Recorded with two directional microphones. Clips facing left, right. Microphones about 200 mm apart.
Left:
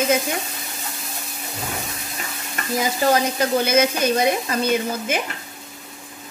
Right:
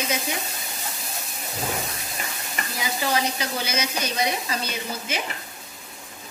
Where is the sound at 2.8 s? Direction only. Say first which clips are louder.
Left 6 dB; 45° left (ahead or behind).